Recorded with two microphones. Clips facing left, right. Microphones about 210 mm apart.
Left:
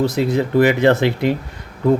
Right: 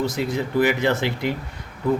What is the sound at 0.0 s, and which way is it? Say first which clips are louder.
Speech: left 6 dB; 60° left (ahead or behind).